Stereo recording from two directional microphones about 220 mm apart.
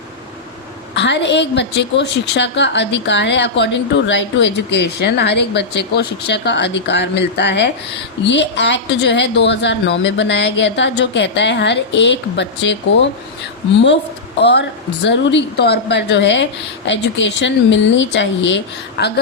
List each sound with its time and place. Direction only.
0.9 s a woman's voice: 50° left (ahead or behind)
14.4 s a woman's voice: 50° left (ahead or behind)